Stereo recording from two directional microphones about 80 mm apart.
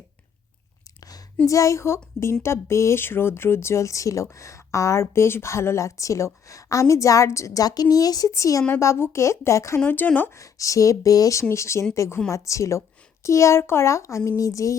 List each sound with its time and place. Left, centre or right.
1.5 s speech: left
9.8 s speech: left
10.3 s speech: left